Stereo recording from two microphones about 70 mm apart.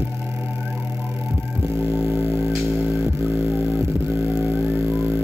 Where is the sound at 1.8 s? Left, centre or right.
Right.